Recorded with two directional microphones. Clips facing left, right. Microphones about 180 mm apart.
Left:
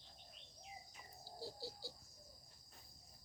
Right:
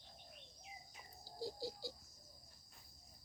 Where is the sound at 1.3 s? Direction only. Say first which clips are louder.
Right 5 dB; 15° right (ahead or behind).